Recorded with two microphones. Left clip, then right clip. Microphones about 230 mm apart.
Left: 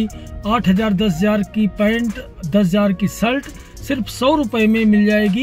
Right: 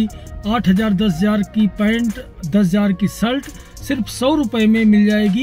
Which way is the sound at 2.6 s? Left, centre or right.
Left.